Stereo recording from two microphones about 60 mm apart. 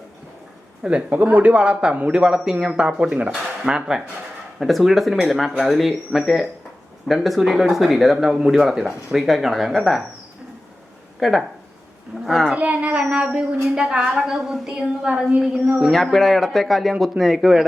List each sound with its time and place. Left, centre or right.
0.8 s a man's voice: centre
4.6 s speech: centre
11.2 s speech: centre
12.5 s a child's voice: right; by 17.7 s centre